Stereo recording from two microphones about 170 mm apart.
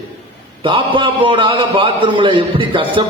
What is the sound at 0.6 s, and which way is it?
A man's voice, 30° right (ahead or behind).